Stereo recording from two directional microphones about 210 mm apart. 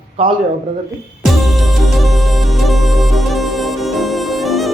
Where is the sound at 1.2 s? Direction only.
Centre (ahead or behind).